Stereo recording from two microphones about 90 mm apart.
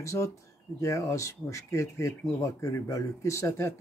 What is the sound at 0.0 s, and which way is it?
Speech, 35° left (ahead or behind).